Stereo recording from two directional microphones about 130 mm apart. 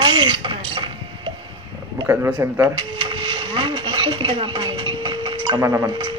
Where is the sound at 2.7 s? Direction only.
40° right (ahead or behind).